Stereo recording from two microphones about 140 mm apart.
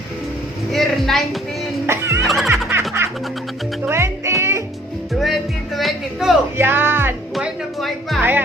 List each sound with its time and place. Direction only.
0.7 s a woman's voice: centre (ahead or behind)
1.9 s music: 20° right (ahead or behind)
2.2 s music: centre (ahead or behind)
3.0 s music: 20° right (ahead or behind)
5.2 s music: centre (ahead or behind)
6.6 s music: 15° right (ahead or behind)
7.3 s music: centre (ahead or behind)